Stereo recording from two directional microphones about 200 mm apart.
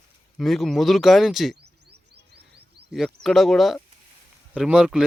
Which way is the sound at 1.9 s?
55° right (ahead or behind).